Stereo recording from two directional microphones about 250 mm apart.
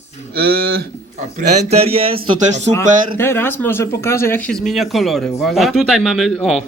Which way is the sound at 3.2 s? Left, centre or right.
Centre.